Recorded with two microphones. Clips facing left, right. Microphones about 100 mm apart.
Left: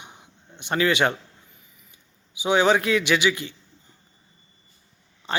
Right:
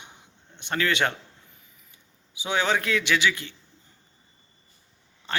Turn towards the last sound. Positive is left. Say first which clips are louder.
# left 3 dB
turn(degrees=15)  # may be behind; listen again after turning